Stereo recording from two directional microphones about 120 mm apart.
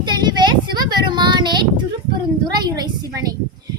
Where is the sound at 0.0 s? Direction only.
35° right (ahead or behind).